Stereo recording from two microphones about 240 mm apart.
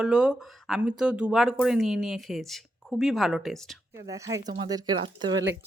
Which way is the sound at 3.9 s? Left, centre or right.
Centre.